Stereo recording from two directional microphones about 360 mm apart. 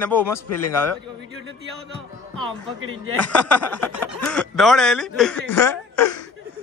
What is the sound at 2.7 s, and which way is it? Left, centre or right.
Speech, right.